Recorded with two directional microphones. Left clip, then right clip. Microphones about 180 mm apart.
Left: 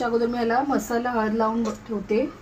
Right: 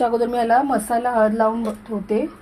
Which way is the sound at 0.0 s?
55° right (ahead or behind).